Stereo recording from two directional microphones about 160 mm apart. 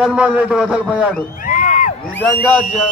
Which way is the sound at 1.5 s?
50° left (ahead or behind).